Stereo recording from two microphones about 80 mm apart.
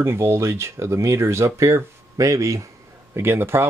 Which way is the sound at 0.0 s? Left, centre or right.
Right.